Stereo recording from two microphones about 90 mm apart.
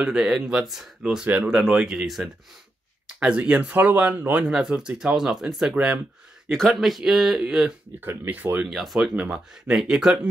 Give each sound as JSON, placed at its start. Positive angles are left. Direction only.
{"t": 0.0, "sound": "speech", "side_deg": -10}
{"t": 1.2, "sound": "speech", "side_deg": -15}
{"t": 1.5, "sound": "speech", "side_deg": -5}
{"t": 6.5, "sound": "speech", "side_deg": 5}
{"t": 8.0, "sound": "speech", "side_deg": -20}
{"t": 8.6, "sound": "speech", "side_deg": 0}
{"t": 9.1, "sound": "speech", "side_deg": -15}